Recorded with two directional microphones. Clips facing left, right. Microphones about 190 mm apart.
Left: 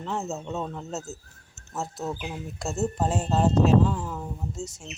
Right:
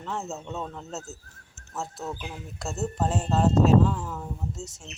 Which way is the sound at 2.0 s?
15° left (ahead or behind).